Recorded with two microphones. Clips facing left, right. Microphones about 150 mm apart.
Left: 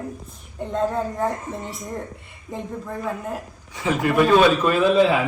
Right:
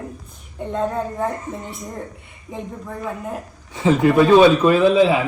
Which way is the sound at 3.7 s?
25° right (ahead or behind).